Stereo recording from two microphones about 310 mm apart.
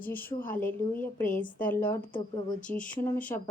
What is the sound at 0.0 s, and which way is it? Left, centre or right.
Speech, centre.